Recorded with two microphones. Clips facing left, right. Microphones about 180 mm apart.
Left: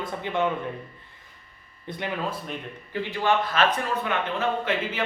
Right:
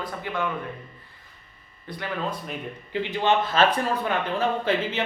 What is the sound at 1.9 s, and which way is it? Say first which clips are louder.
Speech: left 2 dB; 20° left (ahead or behind).